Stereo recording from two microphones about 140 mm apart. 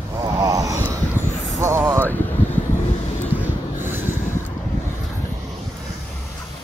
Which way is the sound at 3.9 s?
15° right (ahead or behind).